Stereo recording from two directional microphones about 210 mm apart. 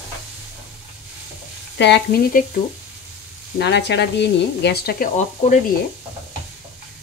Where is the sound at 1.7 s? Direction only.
55° left (ahead or behind).